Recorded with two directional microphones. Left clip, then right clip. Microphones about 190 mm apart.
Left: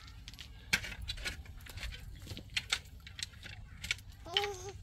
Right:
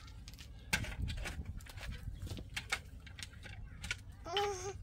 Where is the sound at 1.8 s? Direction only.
40° right (ahead or behind).